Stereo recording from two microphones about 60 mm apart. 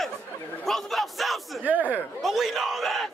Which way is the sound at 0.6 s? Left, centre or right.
Centre.